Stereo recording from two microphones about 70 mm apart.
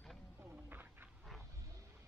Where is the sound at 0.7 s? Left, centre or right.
Right.